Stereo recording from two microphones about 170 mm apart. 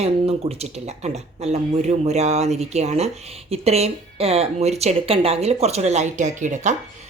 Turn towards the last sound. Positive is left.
turn(degrees=-45)  # may be behind; listen again after turning